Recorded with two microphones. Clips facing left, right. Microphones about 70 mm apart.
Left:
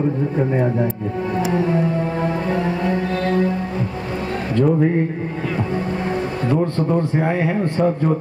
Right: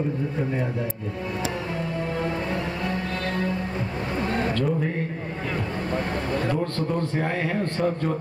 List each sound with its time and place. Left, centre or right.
2.5 s music: left
6.5 s speech: centre